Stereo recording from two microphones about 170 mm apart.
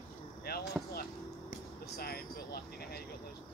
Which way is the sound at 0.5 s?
65° left (ahead or behind).